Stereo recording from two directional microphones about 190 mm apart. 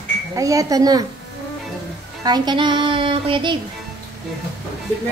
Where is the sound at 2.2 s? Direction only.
20° right (ahead or behind).